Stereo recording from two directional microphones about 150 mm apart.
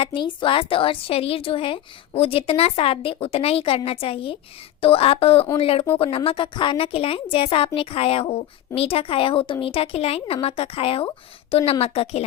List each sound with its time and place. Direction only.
0.0 s a woman's voice: 35° left (ahead or behind)